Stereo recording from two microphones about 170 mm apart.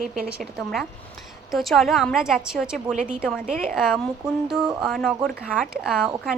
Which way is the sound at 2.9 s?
45° right (ahead or behind).